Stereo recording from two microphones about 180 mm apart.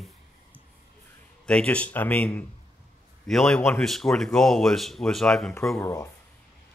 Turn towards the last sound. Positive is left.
turn(degrees=15)  # may be behind; listen again after turning